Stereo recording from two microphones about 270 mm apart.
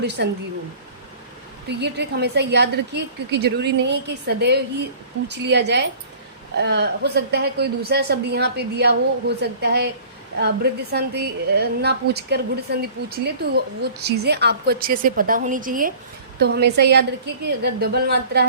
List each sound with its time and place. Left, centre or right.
0.2 s a woman's voice: right
1.6 s a woman's voice: right